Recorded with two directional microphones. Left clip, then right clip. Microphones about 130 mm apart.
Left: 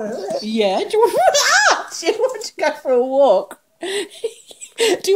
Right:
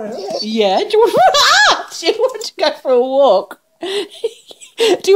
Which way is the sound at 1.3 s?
90° right.